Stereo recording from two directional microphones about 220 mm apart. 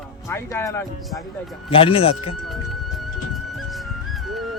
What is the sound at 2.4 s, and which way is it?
Music, centre (ahead or behind).